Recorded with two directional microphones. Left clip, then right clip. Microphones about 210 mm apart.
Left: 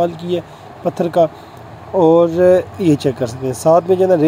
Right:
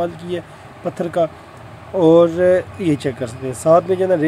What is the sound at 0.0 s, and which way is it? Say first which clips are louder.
Speech: left 5 dB; 5° left (ahead or behind).